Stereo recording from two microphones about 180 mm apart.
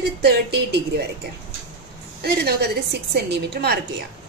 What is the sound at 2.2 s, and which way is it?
A woman's voice, 65° right (ahead or behind).